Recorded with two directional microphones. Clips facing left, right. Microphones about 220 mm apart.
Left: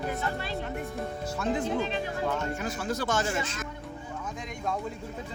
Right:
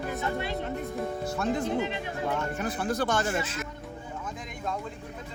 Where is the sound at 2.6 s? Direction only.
55° right (ahead or behind).